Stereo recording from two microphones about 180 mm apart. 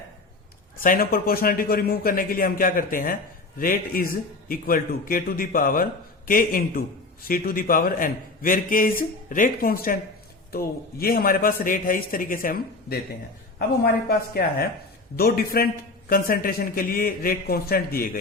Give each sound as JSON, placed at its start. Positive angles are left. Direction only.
{"t": 0.8, "sound": "a man's voice", "side_deg": 55}